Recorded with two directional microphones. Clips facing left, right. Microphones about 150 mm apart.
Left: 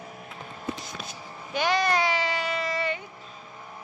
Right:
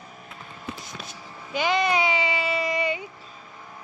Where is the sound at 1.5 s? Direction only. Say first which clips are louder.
Right 1 dB; centre (ahead or behind).